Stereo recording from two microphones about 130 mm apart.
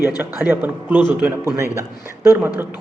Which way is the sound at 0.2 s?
15° right (ahead or behind).